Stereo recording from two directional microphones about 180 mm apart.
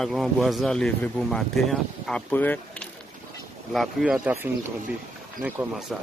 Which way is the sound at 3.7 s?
Centre (ahead or behind).